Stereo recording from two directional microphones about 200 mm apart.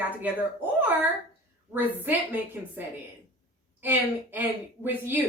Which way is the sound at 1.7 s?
10° right (ahead or behind).